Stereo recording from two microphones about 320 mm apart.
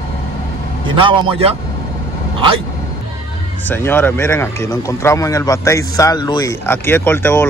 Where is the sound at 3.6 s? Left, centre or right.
Centre.